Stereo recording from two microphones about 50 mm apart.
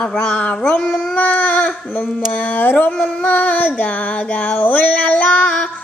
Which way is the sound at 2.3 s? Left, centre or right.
Left.